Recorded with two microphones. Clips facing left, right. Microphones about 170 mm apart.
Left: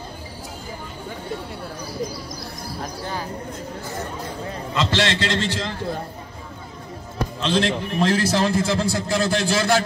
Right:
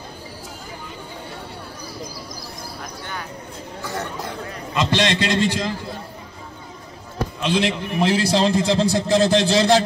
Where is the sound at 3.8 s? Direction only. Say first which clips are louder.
Right 5 dB; 75° right (ahead or behind).